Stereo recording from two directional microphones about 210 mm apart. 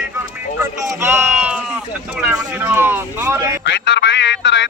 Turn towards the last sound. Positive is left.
turn(degrees=55)  # may be behind; listen again after turning